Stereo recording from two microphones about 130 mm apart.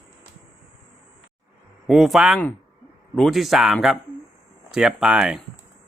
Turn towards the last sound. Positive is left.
turn(degrees=-5)  # may be behind; listen again after turning